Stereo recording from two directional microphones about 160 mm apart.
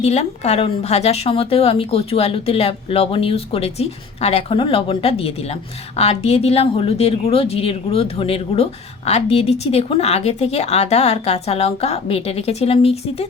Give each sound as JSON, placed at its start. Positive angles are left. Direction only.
{"t": 0.0, "sound": "a woman's voice", "side_deg": 45}